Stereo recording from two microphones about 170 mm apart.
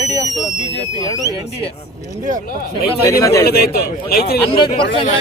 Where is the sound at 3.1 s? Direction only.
20° left (ahead or behind).